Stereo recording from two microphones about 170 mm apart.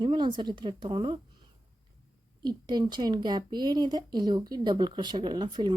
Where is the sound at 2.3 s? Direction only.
25° right (ahead or behind).